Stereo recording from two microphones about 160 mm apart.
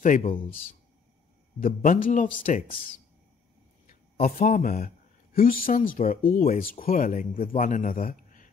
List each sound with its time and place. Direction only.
0.0 s speech: 55° left (ahead or behind)